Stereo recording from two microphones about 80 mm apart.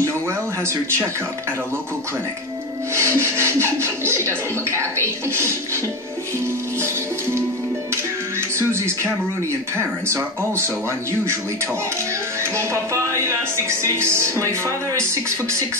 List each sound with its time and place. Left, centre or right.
2.9 s music: right
6.8 s music: right
10.0 s music: right
12.5 s music: right